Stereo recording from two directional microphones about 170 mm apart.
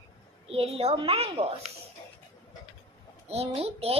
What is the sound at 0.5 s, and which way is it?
Speech, 35° right (ahead or behind).